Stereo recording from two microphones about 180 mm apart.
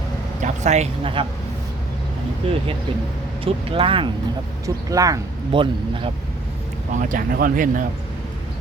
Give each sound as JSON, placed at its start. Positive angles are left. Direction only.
{"t": 0.4, "sound": "speech", "side_deg": -40}
{"t": 3.4, "sound": "speech", "side_deg": -30}
{"t": 4.6, "sound": "speech", "side_deg": -20}
{"t": 6.9, "sound": "speech", "side_deg": -50}